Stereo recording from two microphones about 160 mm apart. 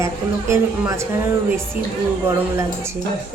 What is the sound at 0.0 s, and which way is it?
Speech, 20° right (ahead or behind).